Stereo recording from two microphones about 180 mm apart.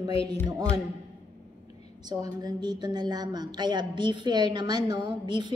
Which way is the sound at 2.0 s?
20° right (ahead or behind).